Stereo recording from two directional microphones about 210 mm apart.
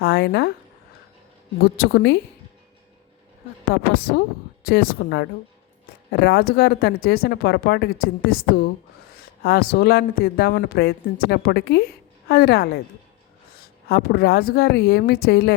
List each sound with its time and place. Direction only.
0.0 s speech: 50° left (ahead or behind)
1.6 s speech: 50° left (ahead or behind)
3.7 s speech: 50° left (ahead or behind)
13.8 s speech: 50° left (ahead or behind)